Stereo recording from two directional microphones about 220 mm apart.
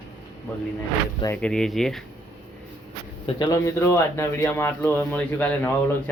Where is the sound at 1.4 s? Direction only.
5° left (ahead or behind).